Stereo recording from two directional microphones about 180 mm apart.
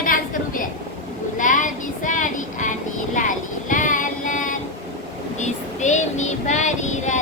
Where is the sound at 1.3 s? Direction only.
45° left (ahead or behind).